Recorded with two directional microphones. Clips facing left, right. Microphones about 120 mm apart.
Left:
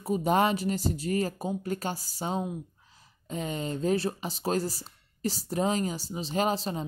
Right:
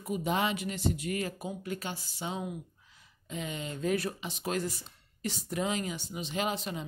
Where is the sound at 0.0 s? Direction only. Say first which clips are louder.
Left 6 dB; 35° left (ahead or behind).